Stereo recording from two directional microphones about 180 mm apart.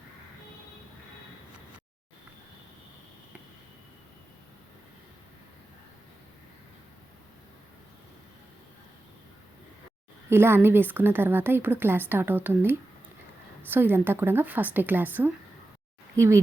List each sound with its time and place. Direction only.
10.2 s a woman's voice: 15° right (ahead or behind)